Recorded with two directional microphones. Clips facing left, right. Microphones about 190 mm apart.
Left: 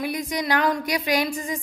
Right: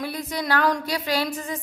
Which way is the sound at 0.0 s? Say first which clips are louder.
Left 2 dB; 15° left (ahead or behind).